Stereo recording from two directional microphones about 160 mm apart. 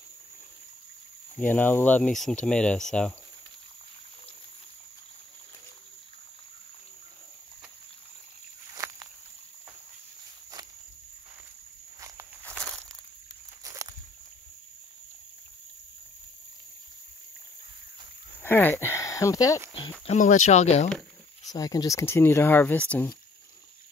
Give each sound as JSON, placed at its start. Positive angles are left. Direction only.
{"t": 1.4, "sound": "speech", "side_deg": 10}
{"t": 8.7, "sound": "walk", "side_deg": -20}
{"t": 13.7, "sound": "walk", "side_deg": -20}
{"t": 18.4, "sound": "a sound", "side_deg": 10}
{"t": 20.1, "sound": "speech", "side_deg": 50}
{"t": 21.5, "sound": "speech", "side_deg": 25}